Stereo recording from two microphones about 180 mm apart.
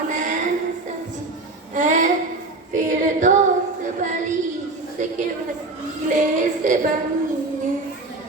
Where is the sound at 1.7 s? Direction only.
45° right (ahead or behind).